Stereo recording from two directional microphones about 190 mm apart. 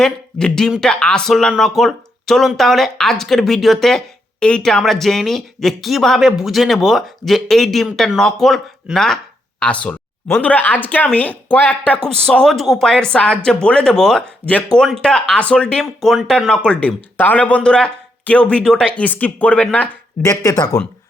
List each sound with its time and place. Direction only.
0.0 s speech: 5° left (ahead or behind)
20.3 s speech: 20° left (ahead or behind)